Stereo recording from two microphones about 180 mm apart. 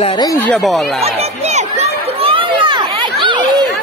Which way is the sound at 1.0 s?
35° right (ahead or behind).